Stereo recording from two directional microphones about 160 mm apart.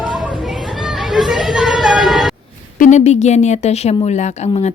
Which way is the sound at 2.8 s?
45° left (ahead or behind).